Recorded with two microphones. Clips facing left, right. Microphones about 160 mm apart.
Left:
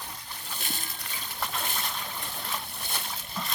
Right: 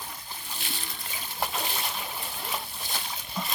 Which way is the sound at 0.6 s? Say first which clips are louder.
Left 2 dB; 45° left (ahead or behind).